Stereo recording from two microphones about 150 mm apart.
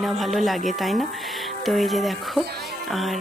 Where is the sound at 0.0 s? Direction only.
Centre (ahead or behind).